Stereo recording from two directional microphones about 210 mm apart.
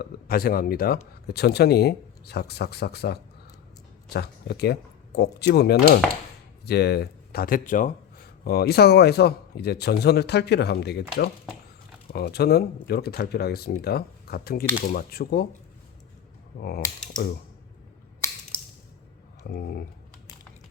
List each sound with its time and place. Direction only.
0.0 s speech: 45° left (ahead or behind)
12.1 s speech: 50° left (ahead or behind)
16.6 s speech: 45° left (ahead or behind)
19.5 s speech: 45° left (ahead or behind)